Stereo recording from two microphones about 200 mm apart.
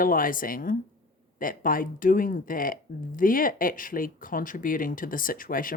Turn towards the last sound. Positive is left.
turn(degrees=45)  # may be behind; listen again after turning